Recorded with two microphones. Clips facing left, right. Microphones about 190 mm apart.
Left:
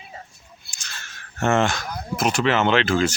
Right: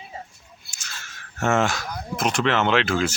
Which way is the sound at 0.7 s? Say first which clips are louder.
Even; 5° right (ahead or behind).